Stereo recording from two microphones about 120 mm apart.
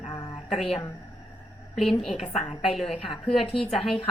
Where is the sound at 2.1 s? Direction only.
55° left (ahead or behind).